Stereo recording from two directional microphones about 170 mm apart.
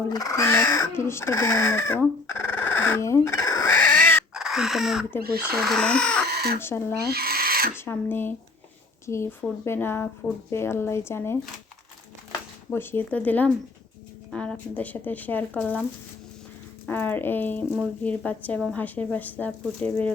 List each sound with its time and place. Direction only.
0.1 s speech: 20° left (ahead or behind)
4.4 s crow: centre (ahead or behind)
5.4 s speech: 5° right (ahead or behind)
6.2 s chicken: 65° right (ahead or behind)
6.6 s speech: 15° left (ahead or behind)
7.0 s owl: 65° right (ahead or behind)
7.8 s speech: 10° left (ahead or behind)
12.7 s speech: 15° left (ahead or behind)
16.8 s speech: 10° left (ahead or behind)